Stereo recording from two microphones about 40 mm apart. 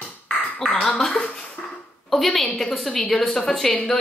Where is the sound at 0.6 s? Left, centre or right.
Centre.